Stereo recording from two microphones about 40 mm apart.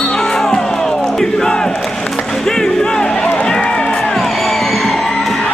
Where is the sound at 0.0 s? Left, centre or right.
Centre.